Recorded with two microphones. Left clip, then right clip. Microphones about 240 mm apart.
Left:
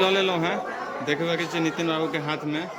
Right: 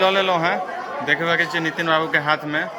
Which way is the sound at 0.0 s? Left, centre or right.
Centre.